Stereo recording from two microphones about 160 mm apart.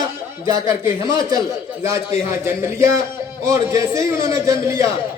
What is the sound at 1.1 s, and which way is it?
Speech, 20° right (ahead or behind).